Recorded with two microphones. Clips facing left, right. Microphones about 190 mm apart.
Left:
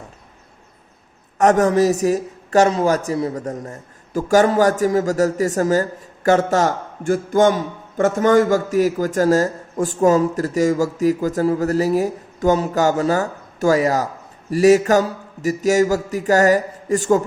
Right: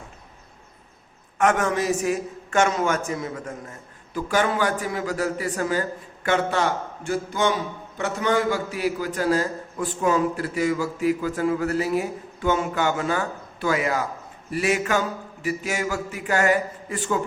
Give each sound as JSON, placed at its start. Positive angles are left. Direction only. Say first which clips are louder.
{"t": 1.4, "sound": "a man's voice", "louder": "left 7 dB", "side_deg": 40}